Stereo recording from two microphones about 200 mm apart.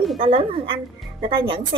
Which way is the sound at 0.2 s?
25° right (ahead or behind).